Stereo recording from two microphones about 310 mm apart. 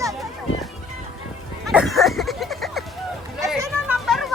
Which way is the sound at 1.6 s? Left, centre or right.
Centre.